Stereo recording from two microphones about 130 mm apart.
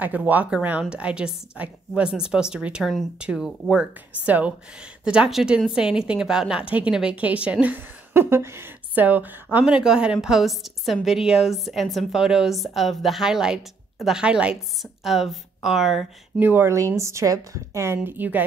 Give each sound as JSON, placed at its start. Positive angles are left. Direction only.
{"t": 0.0, "sound": "a woman's voice", "side_deg": -10}
{"t": 16.3, "sound": "a woman's voice", "side_deg": -15}